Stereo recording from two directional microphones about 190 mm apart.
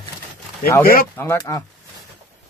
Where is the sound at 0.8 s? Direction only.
50° left (ahead or behind).